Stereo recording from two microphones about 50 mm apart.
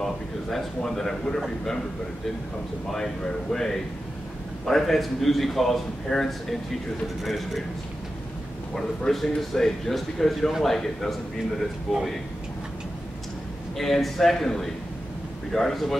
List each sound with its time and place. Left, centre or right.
0.0 s a man's voice: centre
2.9 s a man's voice: centre
8.7 s a man's voice: centre
13.7 s a man's voice: centre